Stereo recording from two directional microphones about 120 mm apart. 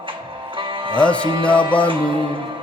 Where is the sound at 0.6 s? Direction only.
45° right (ahead or behind).